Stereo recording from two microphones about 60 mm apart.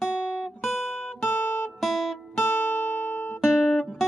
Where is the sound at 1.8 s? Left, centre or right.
Centre.